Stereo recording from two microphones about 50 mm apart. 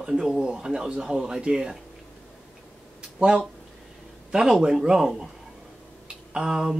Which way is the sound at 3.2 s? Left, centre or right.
Centre.